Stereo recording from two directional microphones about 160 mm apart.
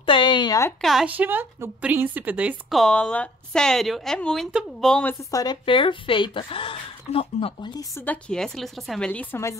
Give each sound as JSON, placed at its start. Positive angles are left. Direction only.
{"t": 0.0, "sound": "a sound", "side_deg": 30}
{"t": 0.7, "sound": "a woman's voice", "side_deg": 0}
{"t": 5.3, "sound": "speech", "side_deg": 25}
{"t": 8.0, "sound": "a woman's voice", "side_deg": 5}